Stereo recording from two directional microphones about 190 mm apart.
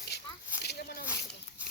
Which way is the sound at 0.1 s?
60° left (ahead or behind).